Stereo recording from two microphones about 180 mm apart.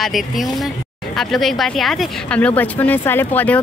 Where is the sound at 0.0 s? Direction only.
Centre (ahead or behind).